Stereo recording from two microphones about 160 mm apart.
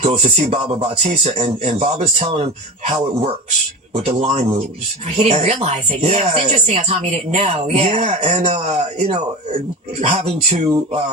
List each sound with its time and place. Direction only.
0.0 s speech: 40° right (ahead or behind)
3.9 s speech: 40° right (ahead or behind)